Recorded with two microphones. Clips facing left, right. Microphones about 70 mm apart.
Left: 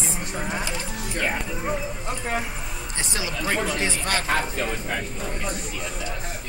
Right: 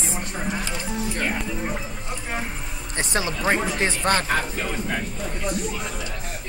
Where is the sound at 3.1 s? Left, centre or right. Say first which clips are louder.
Right 5 dB; right.